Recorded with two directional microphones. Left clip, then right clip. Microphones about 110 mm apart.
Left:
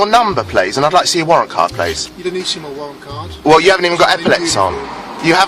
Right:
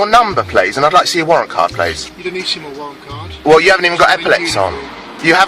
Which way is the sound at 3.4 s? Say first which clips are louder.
Right 1 dB; 10° left (ahead or behind).